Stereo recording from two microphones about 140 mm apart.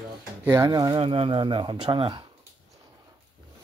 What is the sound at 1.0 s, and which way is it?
Speech, 40° right (ahead or behind).